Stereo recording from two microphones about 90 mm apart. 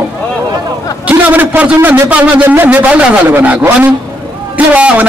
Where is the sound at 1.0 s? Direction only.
20° right (ahead or behind).